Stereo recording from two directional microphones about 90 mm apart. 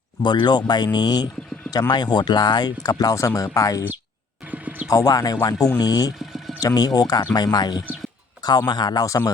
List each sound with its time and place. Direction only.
0.2 s speech: 60° left (ahead or behind); by 3.8 s 40° left (ahead or behind)
4.5 s a sound: 15° right (ahead or behind)
4.9 s speech: 40° left (ahead or behind)
9.0 s speech: 40° left (ahead or behind)